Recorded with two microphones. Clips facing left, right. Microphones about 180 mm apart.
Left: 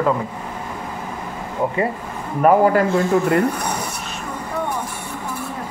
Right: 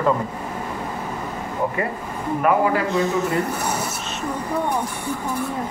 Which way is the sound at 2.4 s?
50° left (ahead or behind).